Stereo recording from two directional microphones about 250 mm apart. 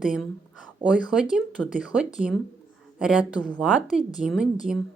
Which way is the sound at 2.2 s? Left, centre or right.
Right.